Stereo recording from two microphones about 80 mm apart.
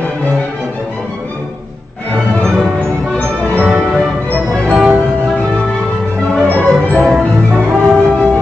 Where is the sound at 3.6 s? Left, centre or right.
Centre.